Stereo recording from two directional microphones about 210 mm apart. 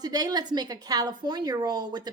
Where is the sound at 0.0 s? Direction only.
20° right (ahead or behind).